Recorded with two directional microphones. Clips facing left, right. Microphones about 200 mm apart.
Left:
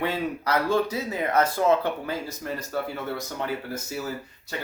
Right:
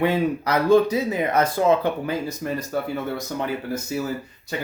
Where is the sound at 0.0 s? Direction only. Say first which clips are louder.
Right 6 dB; 15° right (ahead or behind).